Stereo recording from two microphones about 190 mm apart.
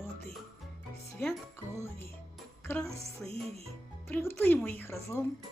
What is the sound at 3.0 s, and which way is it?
Music, 30° right (ahead or behind).